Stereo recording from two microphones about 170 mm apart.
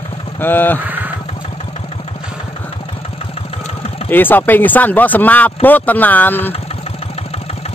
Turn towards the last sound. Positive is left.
turn(degrees=10)  # may be behind; listen again after turning